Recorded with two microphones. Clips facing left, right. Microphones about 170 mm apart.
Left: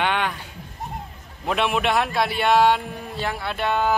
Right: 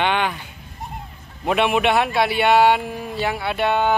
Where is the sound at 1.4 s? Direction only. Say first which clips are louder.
Right 4 dB; 5° right (ahead or behind).